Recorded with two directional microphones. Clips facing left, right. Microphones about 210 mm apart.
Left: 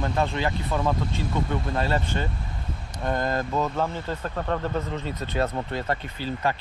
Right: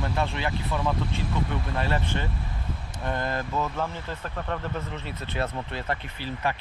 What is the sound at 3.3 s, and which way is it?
Speech, 40° left (ahead or behind).